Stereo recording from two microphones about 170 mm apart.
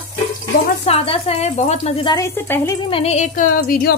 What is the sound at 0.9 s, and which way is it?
A woman's voice, 35° left (ahead or behind).